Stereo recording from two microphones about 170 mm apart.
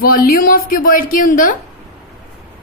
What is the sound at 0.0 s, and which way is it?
Speech, 60° left (ahead or behind).